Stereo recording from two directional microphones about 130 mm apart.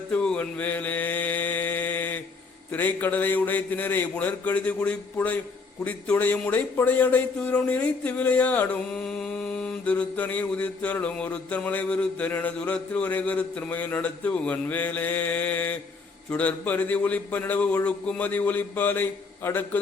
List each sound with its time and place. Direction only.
0.1 s mantra: 10° left (ahead or behind)
2.7 s speech: 15° left (ahead or behind)